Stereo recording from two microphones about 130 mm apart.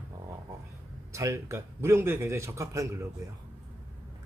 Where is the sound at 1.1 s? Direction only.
20° right (ahead or behind).